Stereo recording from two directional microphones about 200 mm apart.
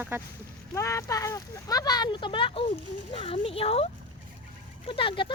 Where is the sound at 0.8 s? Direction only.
15° left (ahead or behind).